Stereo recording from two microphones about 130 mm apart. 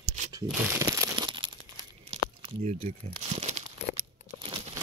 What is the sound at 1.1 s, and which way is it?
Tearing, 35° right (ahead or behind).